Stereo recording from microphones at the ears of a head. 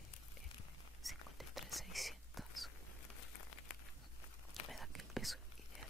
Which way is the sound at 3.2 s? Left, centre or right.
Left.